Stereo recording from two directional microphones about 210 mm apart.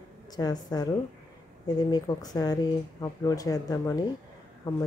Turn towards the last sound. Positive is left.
turn(degrees=20)  # may be behind; listen again after turning